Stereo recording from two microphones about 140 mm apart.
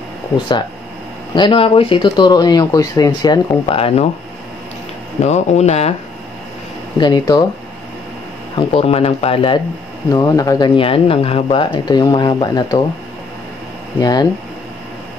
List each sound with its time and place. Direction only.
1.3 s speech: 35° left (ahead or behind)
3.7 s speech: 45° left (ahead or behind)
5.2 s speech: 50° left (ahead or behind)
7.0 s speech: 30° left (ahead or behind)
8.5 s speech: 45° left (ahead or behind)
10.1 s speech: 25° left (ahead or behind)
10.8 s speech: 40° left (ahead or behind)
13.9 s speech: 30° left (ahead or behind)